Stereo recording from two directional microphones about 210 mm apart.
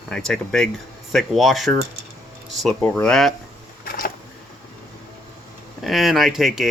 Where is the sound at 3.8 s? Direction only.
45° left (ahead or behind).